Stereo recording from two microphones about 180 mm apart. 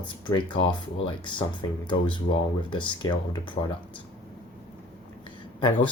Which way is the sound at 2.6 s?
25° left (ahead or behind).